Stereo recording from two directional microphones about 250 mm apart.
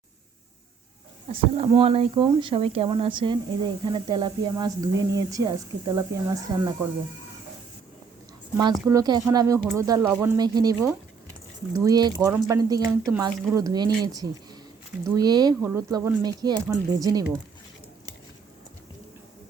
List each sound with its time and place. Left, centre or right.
1.3 s speech: right
8.9 s speech: centre
15.0 s speech: centre